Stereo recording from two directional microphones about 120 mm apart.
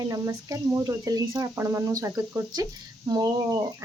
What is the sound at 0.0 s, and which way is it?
Speech, 30° right (ahead or behind).